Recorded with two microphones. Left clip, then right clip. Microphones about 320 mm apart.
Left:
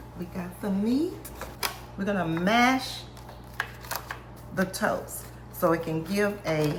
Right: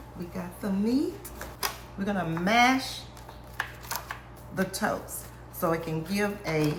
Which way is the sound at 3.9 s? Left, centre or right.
Centre.